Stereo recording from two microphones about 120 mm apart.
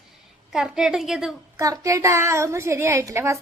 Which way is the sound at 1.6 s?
30° right (ahead or behind).